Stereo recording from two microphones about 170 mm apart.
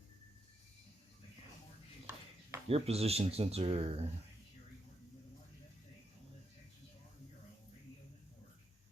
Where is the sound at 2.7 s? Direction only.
35° right (ahead or behind).